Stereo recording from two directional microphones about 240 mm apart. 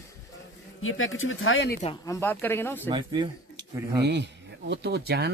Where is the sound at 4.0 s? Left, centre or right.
Right.